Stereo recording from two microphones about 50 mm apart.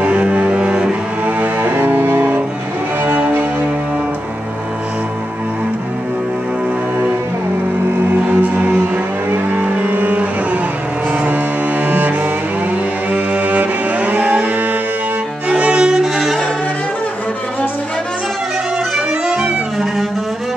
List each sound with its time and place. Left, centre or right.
0.0 s cello: right
1.2 s cello: right
8.3 s music: right
11.9 s cello: right
15.4 s violin: centre
16.2 s music: centre
18.9 s music: centre